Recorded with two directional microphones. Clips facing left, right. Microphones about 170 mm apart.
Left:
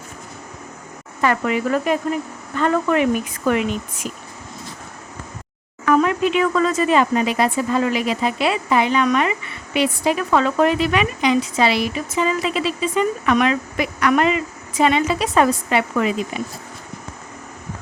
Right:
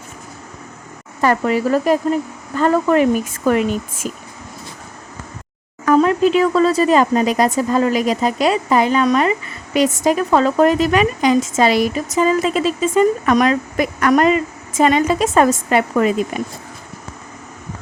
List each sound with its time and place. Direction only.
1.2 s speech: 35° right (ahead or behind)
5.8 s speech: 35° right (ahead or behind)